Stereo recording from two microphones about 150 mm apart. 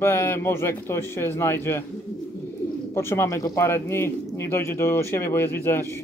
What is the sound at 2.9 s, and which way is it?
Speech, 15° left (ahead or behind).